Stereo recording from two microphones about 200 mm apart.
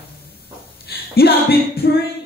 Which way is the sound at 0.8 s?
50° left (ahead or behind).